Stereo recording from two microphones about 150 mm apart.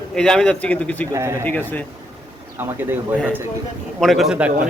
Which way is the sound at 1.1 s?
20° right (ahead or behind).